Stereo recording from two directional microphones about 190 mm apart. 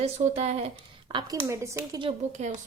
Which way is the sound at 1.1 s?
15° right (ahead or behind).